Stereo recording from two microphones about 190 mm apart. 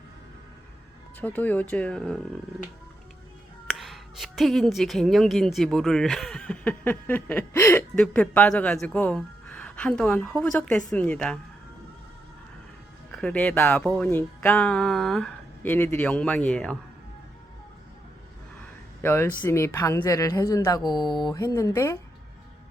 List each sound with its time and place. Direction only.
1.2 s speech: 10° left (ahead or behind)
3.7 s a woman's voice: centre (ahead or behind)
13.1 s speech: 5° left (ahead or behind)
19.0 s speech: 10° left (ahead or behind)